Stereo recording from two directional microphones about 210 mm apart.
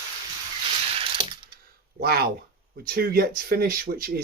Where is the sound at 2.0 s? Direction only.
45° right (ahead or behind).